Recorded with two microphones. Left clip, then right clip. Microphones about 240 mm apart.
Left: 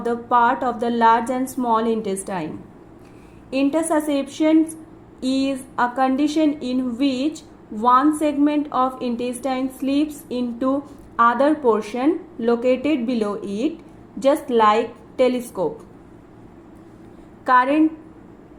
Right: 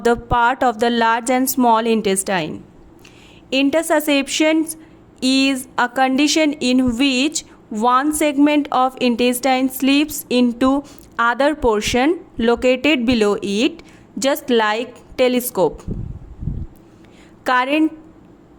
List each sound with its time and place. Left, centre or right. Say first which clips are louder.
0.0 s a woman's voice: right 2 dB; right
3.7 s a woman's voice: right 4 dB; right
17.4 s a woman's voice: left 1 dB; right